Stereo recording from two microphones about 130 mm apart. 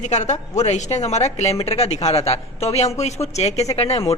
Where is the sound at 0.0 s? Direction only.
60° left (ahead or behind).